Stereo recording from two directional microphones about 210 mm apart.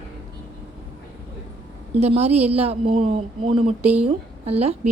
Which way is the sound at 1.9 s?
30° right (ahead or behind).